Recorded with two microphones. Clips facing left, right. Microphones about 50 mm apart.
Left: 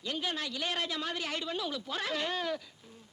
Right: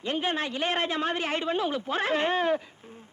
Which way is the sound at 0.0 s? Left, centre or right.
Right.